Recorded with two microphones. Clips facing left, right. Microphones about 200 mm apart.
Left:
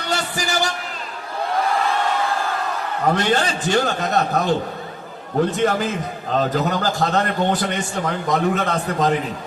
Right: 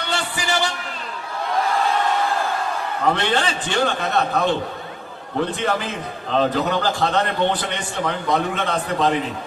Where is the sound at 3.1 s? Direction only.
40° left (ahead or behind).